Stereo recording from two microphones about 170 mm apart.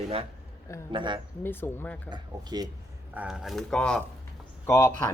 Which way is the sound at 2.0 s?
25° right (ahead or behind).